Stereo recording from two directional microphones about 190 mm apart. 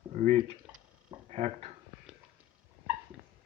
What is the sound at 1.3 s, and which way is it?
Speech, 35° right (ahead or behind).